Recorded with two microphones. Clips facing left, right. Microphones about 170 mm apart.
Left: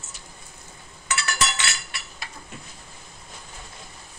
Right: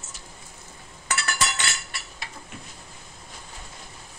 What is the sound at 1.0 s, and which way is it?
Chink, 50° right (ahead or behind).